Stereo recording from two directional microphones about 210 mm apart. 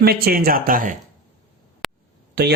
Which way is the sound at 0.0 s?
45° right (ahead or behind).